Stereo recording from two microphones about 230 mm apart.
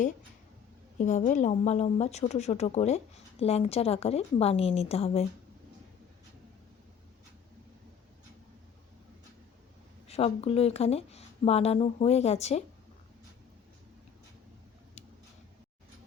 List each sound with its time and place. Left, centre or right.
0.9 s speech: left
10.1 s speech: left